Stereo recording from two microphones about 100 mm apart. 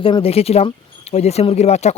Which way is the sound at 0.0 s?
70° left (ahead or behind).